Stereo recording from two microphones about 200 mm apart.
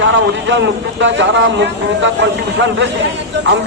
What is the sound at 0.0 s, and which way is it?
Speech, 65° right (ahead or behind).